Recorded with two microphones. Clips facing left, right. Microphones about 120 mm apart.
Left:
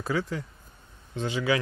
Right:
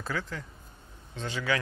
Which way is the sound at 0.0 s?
15° left (ahead or behind).